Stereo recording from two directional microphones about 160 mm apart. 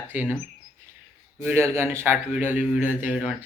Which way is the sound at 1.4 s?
15° right (ahead or behind).